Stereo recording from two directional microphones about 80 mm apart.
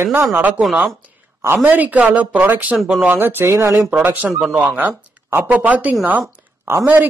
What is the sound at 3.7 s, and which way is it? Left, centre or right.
Speech, centre.